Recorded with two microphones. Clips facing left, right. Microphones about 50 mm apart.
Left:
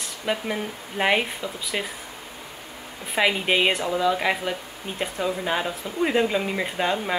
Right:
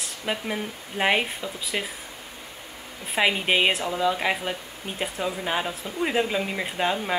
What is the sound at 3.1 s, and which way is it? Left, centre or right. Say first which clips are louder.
Speech: left 1 dB; centre.